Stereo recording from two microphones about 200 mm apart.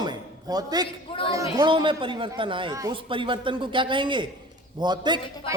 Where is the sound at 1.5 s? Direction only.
25° right (ahead or behind).